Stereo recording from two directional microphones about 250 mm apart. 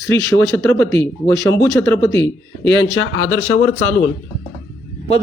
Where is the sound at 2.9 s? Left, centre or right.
Left.